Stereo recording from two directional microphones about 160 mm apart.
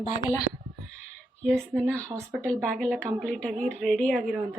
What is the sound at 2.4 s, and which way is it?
A woman's voice, 5° left (ahead or behind).